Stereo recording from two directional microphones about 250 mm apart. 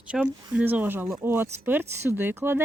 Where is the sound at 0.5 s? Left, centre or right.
Centre.